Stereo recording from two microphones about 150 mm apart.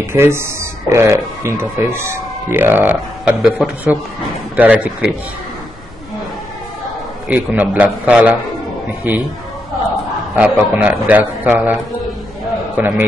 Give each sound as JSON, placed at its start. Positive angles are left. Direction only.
{"t": 0.0, "sound": "speech", "side_deg": -15}
{"t": 7.2, "sound": "speech", "side_deg": -10}
{"t": 10.3, "sound": "a man's voice", "side_deg": -10}